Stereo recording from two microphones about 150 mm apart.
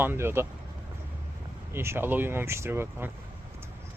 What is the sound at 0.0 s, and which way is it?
Speech, 15° right (ahead or behind).